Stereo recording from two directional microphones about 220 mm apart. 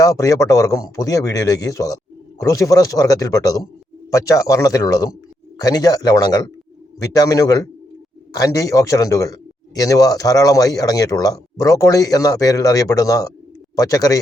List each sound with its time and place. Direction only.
0.0 s a man's voice: 15° left (ahead or behind)